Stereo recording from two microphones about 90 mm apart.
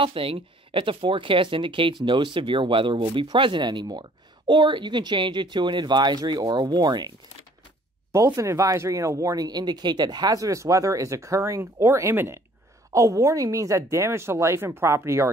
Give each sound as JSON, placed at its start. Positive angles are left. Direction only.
{"t": 0.0, "sound": "speech", "side_deg": -85}
{"t": 8.1, "sound": "speech", "side_deg": -35}